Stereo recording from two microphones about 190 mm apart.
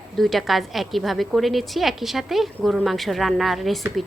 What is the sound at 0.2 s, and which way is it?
A woman's voice, centre (ahead or behind).